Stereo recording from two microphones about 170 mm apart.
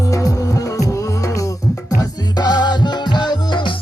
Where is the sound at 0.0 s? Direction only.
20° left (ahead or behind).